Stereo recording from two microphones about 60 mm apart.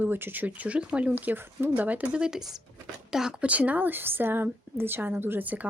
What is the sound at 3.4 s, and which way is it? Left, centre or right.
A woman's voice, right.